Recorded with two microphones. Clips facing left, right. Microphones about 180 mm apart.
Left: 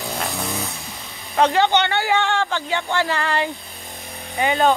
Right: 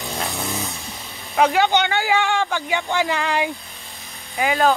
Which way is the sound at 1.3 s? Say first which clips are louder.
Even; 10° right (ahead or behind).